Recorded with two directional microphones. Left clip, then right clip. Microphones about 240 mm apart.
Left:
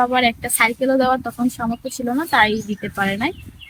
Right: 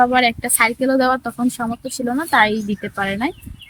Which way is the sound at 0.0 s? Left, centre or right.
Centre.